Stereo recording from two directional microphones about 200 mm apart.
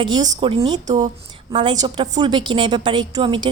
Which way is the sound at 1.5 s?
25° right (ahead or behind).